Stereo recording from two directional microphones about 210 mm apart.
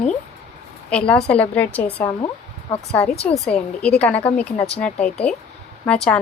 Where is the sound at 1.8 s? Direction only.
20° left (ahead or behind).